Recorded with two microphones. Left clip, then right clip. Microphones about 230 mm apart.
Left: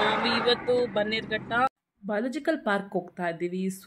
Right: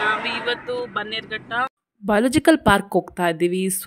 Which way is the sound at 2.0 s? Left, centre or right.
Right.